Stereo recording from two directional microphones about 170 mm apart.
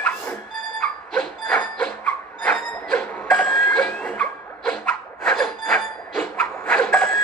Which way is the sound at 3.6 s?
5° left (ahead or behind).